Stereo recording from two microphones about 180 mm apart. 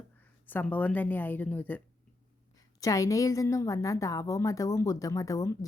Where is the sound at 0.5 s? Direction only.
10° left (ahead or behind).